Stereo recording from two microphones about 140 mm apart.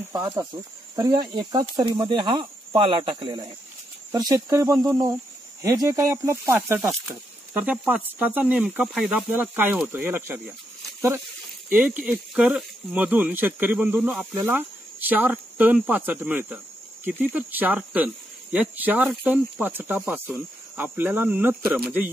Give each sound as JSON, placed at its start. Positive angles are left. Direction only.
{"t": 0.1, "sound": "speech", "side_deg": -25}
{"t": 9.1, "sound": "speech", "side_deg": -10}
{"t": 11.7, "sound": "speech", "side_deg": -10}